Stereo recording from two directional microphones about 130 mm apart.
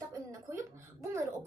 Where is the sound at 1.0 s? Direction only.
20° right (ahead or behind).